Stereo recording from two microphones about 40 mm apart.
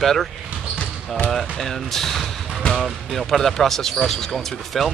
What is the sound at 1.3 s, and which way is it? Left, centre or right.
Speech, centre.